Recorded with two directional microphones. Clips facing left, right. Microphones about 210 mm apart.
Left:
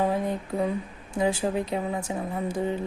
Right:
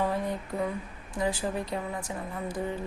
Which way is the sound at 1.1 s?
25° left (ahead or behind).